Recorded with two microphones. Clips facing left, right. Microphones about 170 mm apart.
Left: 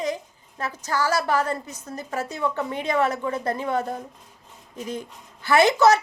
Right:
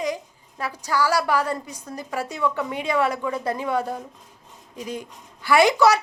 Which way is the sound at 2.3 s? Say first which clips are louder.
Right 2 dB; 40° left (ahead or behind).